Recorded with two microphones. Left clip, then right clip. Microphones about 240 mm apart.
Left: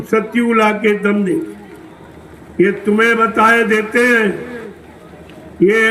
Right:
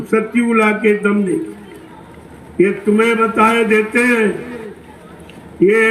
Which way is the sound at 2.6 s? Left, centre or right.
Left.